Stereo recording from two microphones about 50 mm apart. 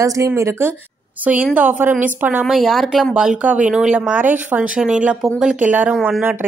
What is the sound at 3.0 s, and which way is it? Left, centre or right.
Speech, centre.